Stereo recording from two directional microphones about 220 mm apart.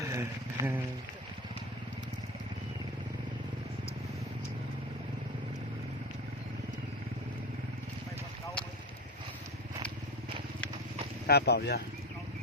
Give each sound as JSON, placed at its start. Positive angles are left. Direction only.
{"t": 0.1, "sound": "speech", "side_deg": -10}
{"t": 11.3, "sound": "speech", "side_deg": 45}